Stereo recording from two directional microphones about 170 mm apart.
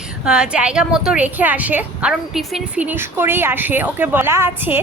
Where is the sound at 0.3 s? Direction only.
5° right (ahead or behind).